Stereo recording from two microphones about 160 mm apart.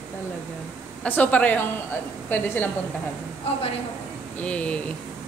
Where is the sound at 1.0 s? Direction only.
10° left (ahead or behind).